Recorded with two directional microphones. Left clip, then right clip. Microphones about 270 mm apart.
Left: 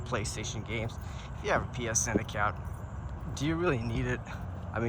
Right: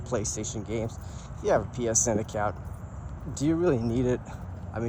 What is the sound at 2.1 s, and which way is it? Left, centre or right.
Speech, centre.